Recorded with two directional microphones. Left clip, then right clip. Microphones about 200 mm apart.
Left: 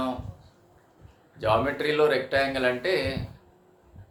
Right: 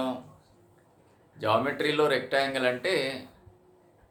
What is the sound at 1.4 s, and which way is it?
Speech, 20° right (ahead or behind).